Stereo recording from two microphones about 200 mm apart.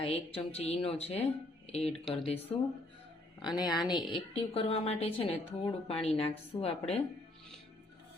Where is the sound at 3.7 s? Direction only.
20° left (ahead or behind).